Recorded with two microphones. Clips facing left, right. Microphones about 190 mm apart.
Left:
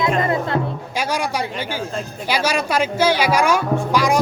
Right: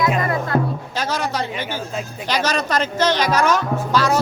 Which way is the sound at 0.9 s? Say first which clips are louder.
Left 3 dB; 10° left (ahead or behind).